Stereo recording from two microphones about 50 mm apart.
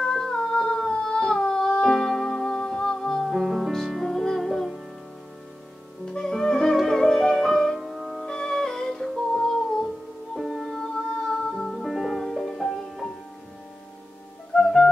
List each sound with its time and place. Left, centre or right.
0.0 s humming: centre
1.8 s music: centre
3.3 s music: centre
6.1 s music: centre
8.3 s music: centre
10.3 s music: centre
11.8 s music: centre
14.5 s music: centre